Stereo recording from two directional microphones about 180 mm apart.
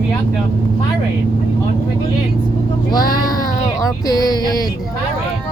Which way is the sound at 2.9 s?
20° left (ahead or behind).